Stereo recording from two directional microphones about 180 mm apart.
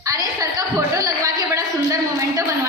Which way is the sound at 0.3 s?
20° right (ahead or behind).